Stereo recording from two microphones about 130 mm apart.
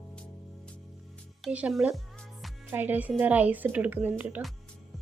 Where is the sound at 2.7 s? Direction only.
15° right (ahead or behind).